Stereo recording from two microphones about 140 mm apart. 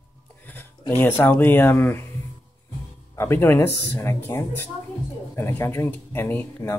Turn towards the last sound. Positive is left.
turn(degrees=15)  # may be behind; listen again after turning